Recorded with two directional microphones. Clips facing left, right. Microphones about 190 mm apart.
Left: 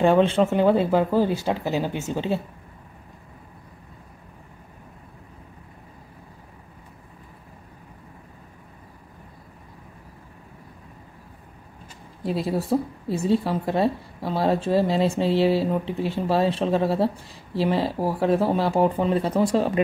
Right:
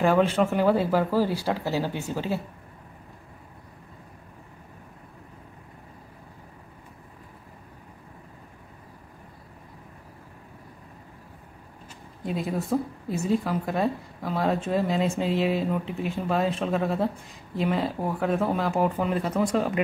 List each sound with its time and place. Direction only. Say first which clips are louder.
0.0 s speech: left 3 dB; 25° left (ahead or behind)
12.2 s a woman's voice: left 4 dB; 35° left (ahead or behind)